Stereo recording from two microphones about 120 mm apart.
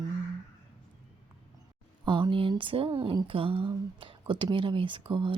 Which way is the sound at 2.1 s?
40° right (ahead or behind).